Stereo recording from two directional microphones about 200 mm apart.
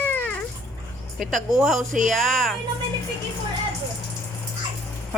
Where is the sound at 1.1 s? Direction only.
Centre (ahead or behind).